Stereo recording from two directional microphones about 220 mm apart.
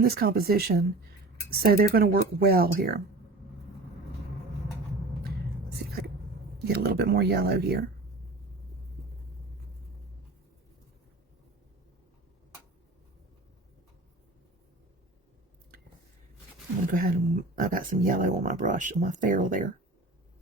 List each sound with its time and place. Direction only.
0.0 s speech: 45° right (ahead or behind)
6.7 s speech: 45° right (ahead or behind)
16.9 s speech: 40° right (ahead or behind)